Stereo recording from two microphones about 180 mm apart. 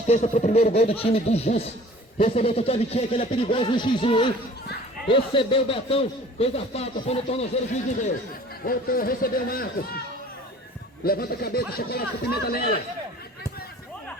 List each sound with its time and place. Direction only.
0.1 s speech: 40° left (ahead or behind)
8.6 s speech: 50° left (ahead or behind)
11.0 s speech: 55° left (ahead or behind)